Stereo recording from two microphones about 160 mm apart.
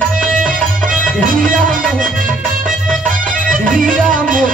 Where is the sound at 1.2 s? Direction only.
55° right (ahead or behind).